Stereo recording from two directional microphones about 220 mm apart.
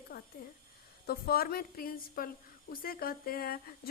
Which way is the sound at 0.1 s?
50° left (ahead or behind).